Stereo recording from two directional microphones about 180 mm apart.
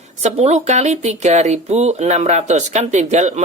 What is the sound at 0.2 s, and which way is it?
Speech, 35° right (ahead or behind).